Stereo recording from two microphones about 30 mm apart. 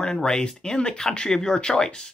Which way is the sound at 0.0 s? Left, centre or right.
Left.